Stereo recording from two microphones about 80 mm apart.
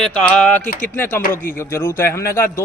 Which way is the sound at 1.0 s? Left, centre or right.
Left.